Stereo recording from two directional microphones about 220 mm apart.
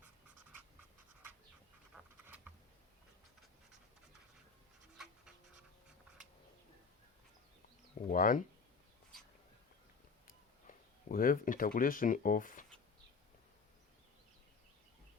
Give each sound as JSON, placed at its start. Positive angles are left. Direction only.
{"t": 0.0, "sound": "writing", "side_deg": -5}
{"t": 2.2, "sound": "a sound", "side_deg": -5}
{"t": 8.1, "sound": "speech", "side_deg": 40}
{"t": 10.2, "sound": "speech", "side_deg": 40}